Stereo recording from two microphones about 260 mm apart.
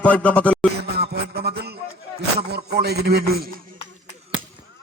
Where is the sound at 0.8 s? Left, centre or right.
Right.